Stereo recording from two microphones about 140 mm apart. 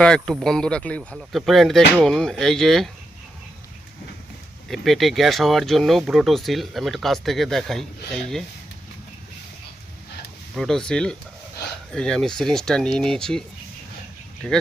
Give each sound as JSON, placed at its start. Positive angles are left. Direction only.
{"t": 0.0, "sound": "speech", "side_deg": 5}
{"t": 4.7, "sound": "speech", "side_deg": 0}
{"t": 10.5, "sound": "speech", "side_deg": 5}